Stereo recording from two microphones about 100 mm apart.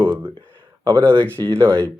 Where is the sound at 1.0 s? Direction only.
15° left (ahead or behind).